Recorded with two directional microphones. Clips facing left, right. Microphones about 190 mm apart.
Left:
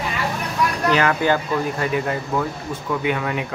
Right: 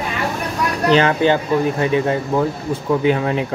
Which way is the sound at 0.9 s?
25° right (ahead or behind).